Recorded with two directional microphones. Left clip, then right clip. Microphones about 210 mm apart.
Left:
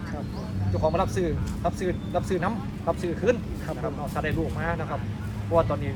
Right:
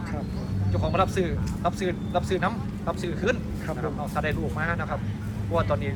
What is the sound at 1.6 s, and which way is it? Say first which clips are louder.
Speech: right 1 dB; 25° left (ahead or behind).